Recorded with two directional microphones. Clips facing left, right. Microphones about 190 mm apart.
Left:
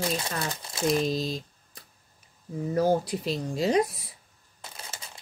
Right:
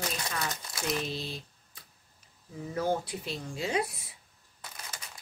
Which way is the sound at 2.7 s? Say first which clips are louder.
Left 6 dB; 40° left (ahead or behind).